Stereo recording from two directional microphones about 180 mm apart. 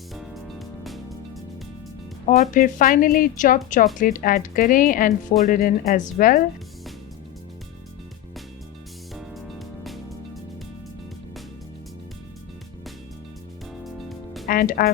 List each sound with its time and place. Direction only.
0.1 s music: centre (ahead or behind)
2.2 s a woman's voice: 45° left (ahead or behind)
9.1 s music: centre (ahead or behind)
13.8 s music: centre (ahead or behind)
14.4 s speech: 55° left (ahead or behind)